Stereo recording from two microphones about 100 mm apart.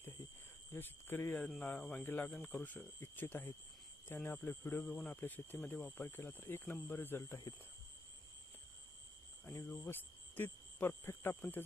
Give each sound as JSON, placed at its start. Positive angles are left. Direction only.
{"t": 0.7, "sound": "speech", "side_deg": 20}
{"t": 9.5, "sound": "speech", "side_deg": 25}